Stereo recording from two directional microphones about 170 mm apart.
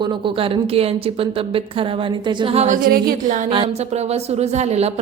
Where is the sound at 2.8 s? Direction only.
55° right (ahead or behind).